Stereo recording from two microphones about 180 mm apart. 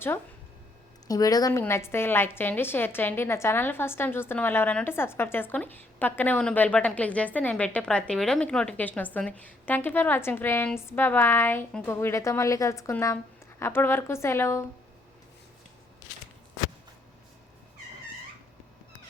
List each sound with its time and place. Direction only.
1.0 s a woman's voice: 20° left (ahead or behind)